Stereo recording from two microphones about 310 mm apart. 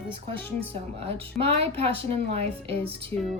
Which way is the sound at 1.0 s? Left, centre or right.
Centre.